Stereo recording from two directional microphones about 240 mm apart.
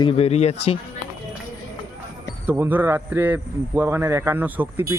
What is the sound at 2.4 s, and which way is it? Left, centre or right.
Speech, centre.